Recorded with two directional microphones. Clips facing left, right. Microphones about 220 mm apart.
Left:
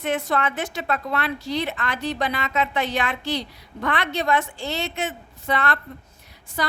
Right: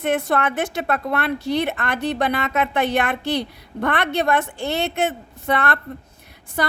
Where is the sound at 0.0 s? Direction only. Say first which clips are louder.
Right 3 dB; 55° right (ahead or behind).